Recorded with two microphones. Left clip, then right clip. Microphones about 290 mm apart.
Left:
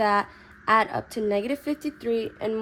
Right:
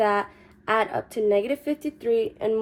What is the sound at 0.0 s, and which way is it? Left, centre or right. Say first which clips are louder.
A woman's voice: even; left.